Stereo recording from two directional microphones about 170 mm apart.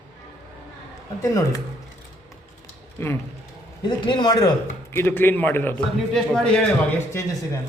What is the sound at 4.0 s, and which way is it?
Speech, 30° left (ahead or behind).